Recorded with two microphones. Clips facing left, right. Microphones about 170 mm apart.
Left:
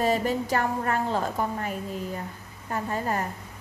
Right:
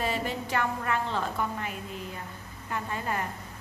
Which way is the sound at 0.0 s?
40° left (ahead or behind).